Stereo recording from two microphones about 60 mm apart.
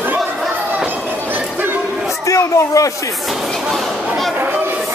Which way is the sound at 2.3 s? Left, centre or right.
Left.